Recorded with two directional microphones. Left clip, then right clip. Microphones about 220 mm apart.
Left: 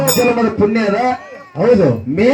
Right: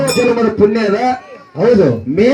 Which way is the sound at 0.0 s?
40° right (ahead or behind).